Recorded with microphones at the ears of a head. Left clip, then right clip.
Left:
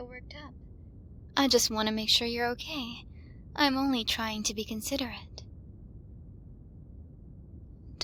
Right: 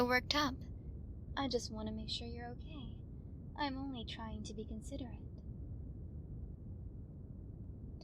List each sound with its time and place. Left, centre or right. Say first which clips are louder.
0.0 s a woman's voice: right 12 dB; right
1.3 s a woman's voice: left 14 dB; left